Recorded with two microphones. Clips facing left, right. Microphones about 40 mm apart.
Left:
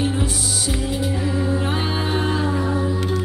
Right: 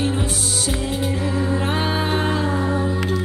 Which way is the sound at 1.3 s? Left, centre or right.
Centre.